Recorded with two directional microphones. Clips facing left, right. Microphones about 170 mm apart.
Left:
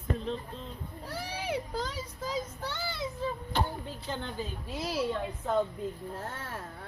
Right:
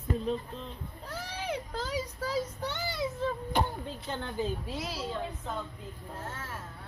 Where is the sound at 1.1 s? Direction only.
10° left (ahead or behind).